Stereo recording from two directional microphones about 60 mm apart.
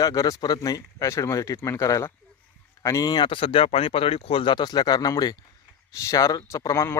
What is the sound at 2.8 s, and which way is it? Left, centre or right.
Speech, left.